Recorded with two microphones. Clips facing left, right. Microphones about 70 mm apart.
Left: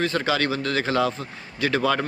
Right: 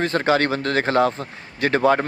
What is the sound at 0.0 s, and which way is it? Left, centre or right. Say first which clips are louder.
Speech: right 4 dB; right.